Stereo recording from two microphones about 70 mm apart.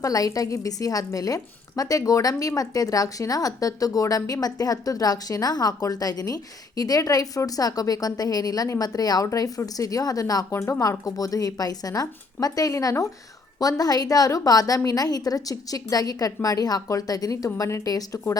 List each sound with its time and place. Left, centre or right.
0.0 s speech: left
9.2 s speech: left
10.5 s speech: left
10.8 s speech: left
13.6 s speech: left